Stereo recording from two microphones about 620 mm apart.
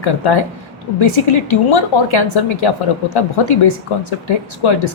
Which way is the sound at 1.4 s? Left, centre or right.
Left.